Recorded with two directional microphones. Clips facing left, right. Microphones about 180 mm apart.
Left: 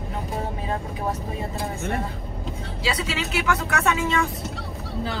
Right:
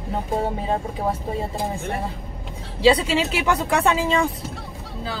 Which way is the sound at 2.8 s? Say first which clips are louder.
Right 11 dB; 30° right (ahead or behind).